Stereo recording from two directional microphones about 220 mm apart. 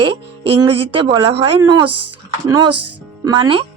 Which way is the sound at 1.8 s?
90° right.